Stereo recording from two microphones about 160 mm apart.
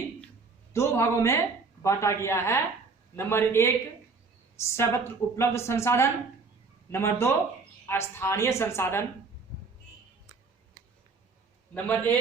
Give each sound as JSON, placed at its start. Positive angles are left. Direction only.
{"t": 0.7, "sound": "a man's voice", "side_deg": 15}
{"t": 11.7, "sound": "a woman's voice", "side_deg": 10}